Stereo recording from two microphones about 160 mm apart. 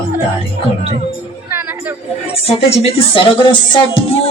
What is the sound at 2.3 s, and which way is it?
Speech, 40° left (ahead or behind).